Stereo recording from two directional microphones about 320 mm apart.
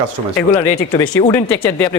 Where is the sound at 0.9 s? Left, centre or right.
Centre.